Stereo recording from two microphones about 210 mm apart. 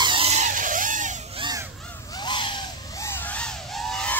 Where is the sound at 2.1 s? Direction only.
20° left (ahead or behind).